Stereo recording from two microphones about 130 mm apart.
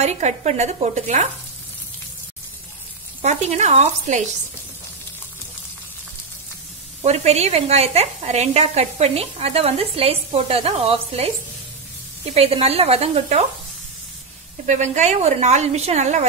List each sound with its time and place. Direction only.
0.0 s a woman's voice: 60° right (ahead or behind)
3.2 s a woman's voice: 60° right (ahead or behind)
7.0 s a woman's voice: 55° right (ahead or behind)
12.4 s a woman's voice: 50° right (ahead or behind)
14.7 s a woman's voice: 65° right (ahead or behind)